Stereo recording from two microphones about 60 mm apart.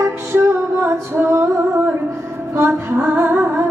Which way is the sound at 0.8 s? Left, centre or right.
Right.